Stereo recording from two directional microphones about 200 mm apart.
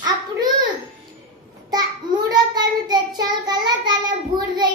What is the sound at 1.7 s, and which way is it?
Child singing, 20° right (ahead or behind).